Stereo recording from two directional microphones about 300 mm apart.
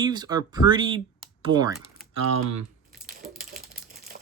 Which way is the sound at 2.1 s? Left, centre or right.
Right.